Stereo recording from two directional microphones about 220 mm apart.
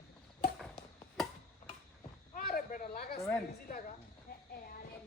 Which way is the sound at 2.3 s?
40° left (ahead or behind).